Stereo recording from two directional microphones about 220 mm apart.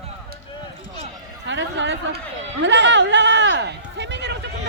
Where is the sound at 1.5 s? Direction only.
55° right (ahead or behind).